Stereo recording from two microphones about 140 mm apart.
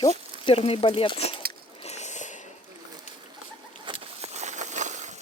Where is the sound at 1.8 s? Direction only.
55° left (ahead or behind).